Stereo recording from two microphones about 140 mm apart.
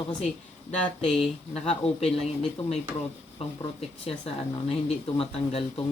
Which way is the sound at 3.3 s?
45° left (ahead or behind).